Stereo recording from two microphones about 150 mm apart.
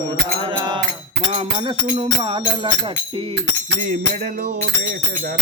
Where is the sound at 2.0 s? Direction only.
35° right (ahead or behind).